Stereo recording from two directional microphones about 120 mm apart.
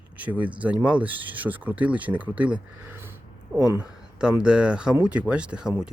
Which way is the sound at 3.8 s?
5° right (ahead or behind).